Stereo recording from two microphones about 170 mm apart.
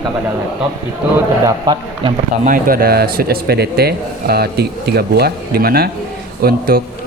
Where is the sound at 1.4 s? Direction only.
25° right (ahead or behind).